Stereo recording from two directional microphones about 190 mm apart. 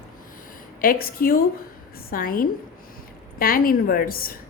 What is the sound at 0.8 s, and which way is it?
A woman's voice, 50° left (ahead or behind).